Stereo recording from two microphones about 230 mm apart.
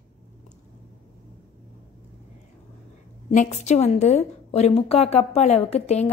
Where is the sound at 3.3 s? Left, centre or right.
Left.